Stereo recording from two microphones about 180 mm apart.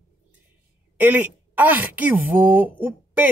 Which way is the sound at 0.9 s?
10° right (ahead or behind).